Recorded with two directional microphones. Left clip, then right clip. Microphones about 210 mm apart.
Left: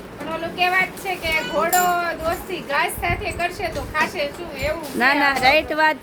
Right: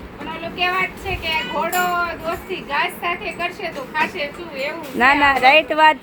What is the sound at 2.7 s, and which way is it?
A woman's voice, 20° left (ahead or behind).